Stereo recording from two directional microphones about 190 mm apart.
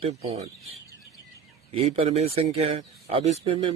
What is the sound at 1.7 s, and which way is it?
Speech, 30° right (ahead or behind).